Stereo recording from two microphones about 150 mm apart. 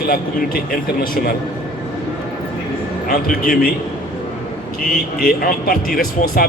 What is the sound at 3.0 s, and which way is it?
Speech, 75° left (ahead or behind).